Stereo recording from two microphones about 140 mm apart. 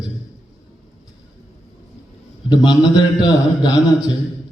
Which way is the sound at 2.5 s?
35° left (ahead or behind).